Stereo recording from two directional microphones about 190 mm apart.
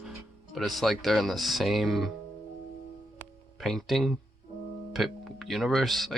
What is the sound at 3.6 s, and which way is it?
Speech, centre (ahead or behind).